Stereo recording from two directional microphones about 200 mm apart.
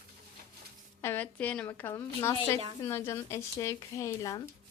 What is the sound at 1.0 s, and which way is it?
Speech, 10° left (ahead or behind).